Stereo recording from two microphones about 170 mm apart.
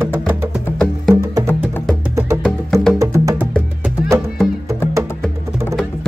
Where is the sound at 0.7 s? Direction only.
5° left (ahead or behind).